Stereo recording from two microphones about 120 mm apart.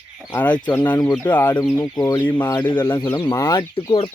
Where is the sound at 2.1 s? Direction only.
15° left (ahead or behind).